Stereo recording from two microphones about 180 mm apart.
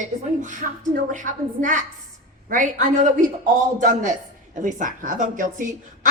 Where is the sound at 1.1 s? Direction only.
45° right (ahead or behind).